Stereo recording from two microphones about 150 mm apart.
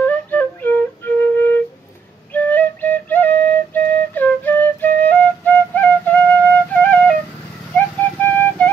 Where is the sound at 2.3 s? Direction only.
10° left (ahead or behind).